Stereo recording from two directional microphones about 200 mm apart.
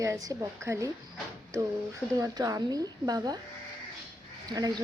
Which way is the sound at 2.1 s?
15° right (ahead or behind).